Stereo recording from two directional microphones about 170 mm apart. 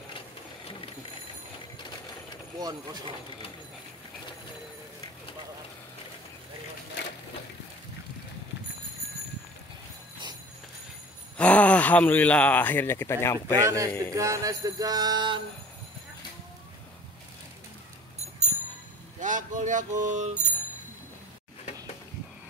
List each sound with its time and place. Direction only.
1.8 s a sound: 25° left (ahead or behind)
2.6 s music: 25° right (ahead or behind)
11.3 s speech: 10° left (ahead or behind)
13.6 s a man's voice: 20° right (ahead or behind)
14.1 s music: 20° right (ahead or behind)
19.1 s speech: 50° right (ahead or behind)